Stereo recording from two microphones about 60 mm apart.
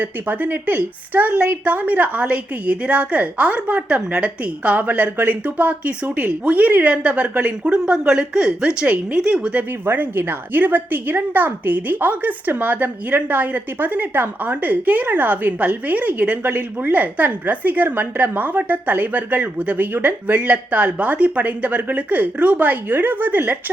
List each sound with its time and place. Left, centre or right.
0.0 s a woman's voice: right
9.8 s a woman's voice: right